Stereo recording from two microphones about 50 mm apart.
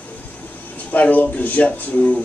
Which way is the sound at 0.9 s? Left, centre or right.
Left.